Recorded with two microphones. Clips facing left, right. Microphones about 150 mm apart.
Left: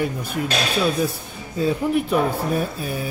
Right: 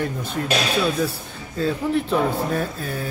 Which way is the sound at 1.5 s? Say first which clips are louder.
Left 2 dB; 10° left (ahead or behind).